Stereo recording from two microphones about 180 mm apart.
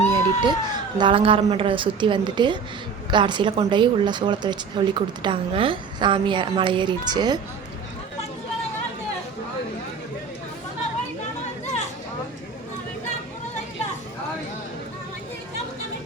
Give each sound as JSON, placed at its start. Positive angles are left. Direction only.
{"t": 0.1, "sound": "speech", "side_deg": -25}
{"t": 11.6, "sound": "chatter", "side_deg": 40}